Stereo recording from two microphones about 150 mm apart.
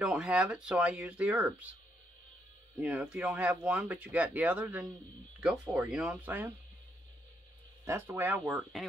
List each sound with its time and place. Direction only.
0.0 s speech: 5° right (ahead or behind)
2.8 s speech: 10° right (ahead or behind)
7.8 s speech: 20° right (ahead or behind)